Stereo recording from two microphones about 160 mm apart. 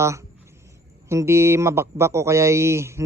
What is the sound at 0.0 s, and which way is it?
A man's voice, 20° right (ahead or behind).